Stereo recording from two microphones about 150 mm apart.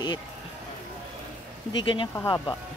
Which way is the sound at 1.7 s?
35° left (ahead or behind).